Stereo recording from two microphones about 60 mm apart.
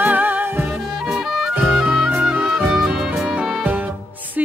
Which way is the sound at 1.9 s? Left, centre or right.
Right.